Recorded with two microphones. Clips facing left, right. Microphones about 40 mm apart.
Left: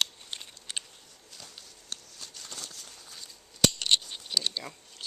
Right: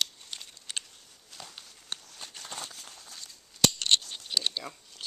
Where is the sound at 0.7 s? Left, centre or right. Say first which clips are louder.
Even; centre.